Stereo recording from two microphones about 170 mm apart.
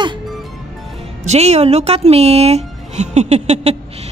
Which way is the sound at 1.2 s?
40° right (ahead or behind).